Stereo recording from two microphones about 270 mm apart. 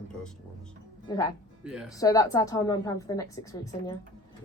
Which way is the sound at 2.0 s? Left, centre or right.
Centre.